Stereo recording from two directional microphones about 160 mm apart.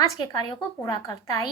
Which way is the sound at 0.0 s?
25° left (ahead or behind).